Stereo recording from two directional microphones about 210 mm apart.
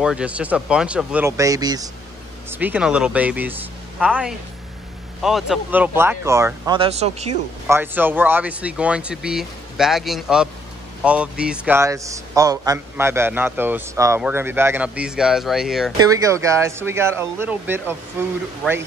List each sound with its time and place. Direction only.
0.0 s a man's voice: 5° right (ahead or behind)
2.5 s a man's voice: 5° right (ahead or behind)
6.8 s speech: 30° right (ahead or behind)
7.6 s a man's voice: 10° right (ahead or behind)
16.0 s a man's voice: 15° right (ahead or behind)